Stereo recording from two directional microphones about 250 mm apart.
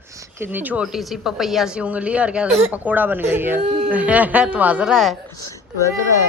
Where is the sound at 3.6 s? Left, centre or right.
Right.